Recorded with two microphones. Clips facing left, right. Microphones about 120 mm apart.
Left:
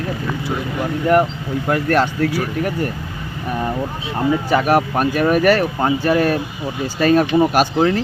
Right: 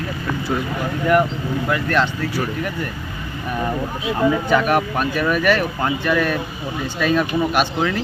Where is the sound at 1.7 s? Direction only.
45° left (ahead or behind).